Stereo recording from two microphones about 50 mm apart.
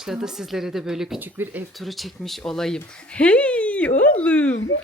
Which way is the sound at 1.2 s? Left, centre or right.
Right.